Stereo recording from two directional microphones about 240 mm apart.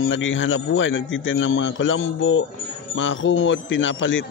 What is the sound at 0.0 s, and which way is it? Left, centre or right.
A man's voice, left.